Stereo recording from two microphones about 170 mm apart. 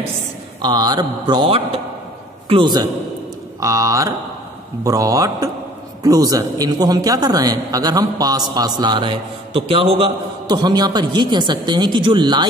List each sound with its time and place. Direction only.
0.6 s a man's voice: 25° right (ahead or behind)